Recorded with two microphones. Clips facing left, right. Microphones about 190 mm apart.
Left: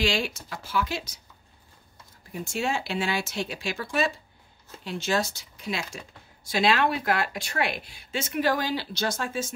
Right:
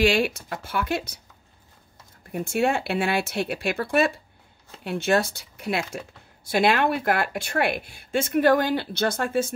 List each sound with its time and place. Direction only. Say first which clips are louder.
0.0 s speech: right 6 dB; 60° right (ahead or behind)
2.3 s speech: right 6 dB; 60° right (ahead or behind)